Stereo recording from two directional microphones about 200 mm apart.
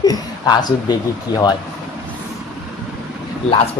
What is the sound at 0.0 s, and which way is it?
Speech, 20° left (ahead or behind).